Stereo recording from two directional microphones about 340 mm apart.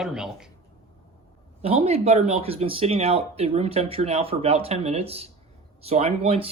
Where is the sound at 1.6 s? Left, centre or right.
Centre.